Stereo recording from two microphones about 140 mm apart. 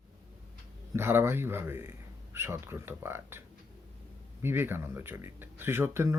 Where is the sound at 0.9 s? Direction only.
15° right (ahead or behind).